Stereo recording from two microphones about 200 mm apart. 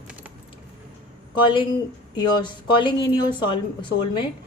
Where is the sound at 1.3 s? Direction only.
25° left (ahead or behind).